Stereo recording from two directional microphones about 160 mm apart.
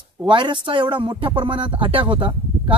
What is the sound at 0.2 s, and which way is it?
A man's voice, 30° right (ahead or behind).